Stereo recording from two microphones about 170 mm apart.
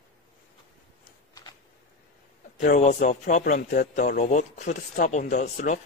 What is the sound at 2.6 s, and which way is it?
Speech, 45° left (ahead or behind).